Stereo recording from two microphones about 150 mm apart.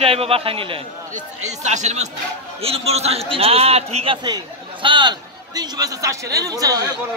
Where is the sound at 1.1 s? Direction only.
50° right (ahead or behind); by 6.9 s 25° right (ahead or behind).